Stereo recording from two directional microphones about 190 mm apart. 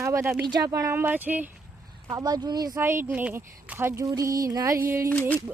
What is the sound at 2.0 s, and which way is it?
Speech, 20° right (ahead or behind).